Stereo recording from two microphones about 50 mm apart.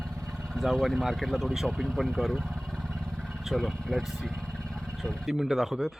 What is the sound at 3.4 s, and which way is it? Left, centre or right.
Speech, centre.